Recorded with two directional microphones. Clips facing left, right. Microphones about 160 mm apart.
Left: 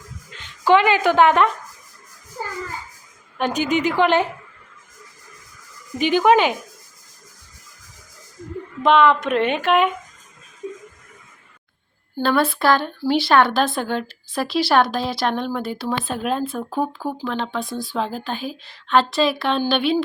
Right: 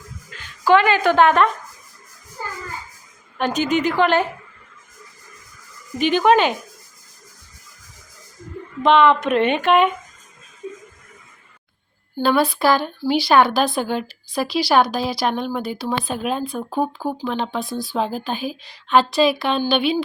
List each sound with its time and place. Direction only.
0.3 s speech: 20° left (ahead or behind)
3.3 s a woman's voice: 15° left (ahead or behind)
6.0 s a woman's voice: 15° left (ahead or behind)
8.8 s speech: 5° left (ahead or behind)
12.1 s speech: centre (ahead or behind)